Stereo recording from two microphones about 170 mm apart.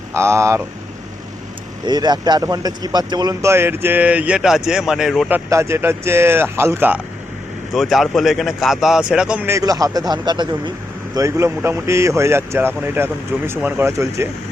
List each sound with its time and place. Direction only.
0.1 s speech: 15° right (ahead or behind)
1.9 s speech: 25° right (ahead or behind); by 5.3 s centre (ahead or behind)
5.3 s speech: 15° right (ahead or behind)
7.7 s speech: centre (ahead or behind); by 14.3 s 15° right (ahead or behind)